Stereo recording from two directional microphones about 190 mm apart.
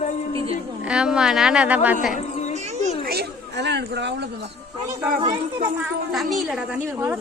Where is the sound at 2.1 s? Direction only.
40° left (ahead or behind).